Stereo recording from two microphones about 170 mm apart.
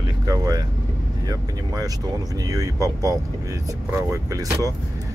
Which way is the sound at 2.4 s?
20° right (ahead or behind).